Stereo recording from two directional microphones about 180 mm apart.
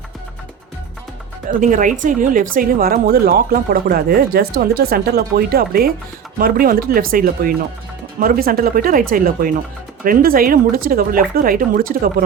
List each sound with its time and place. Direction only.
1.5 s speech: 50° right (ahead or behind)